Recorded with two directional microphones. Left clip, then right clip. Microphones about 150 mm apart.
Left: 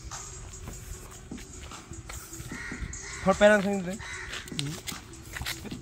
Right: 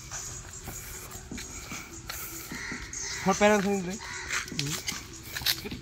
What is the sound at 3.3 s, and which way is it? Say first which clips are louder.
Speech: left 3 dB; 15° left (ahead or behind).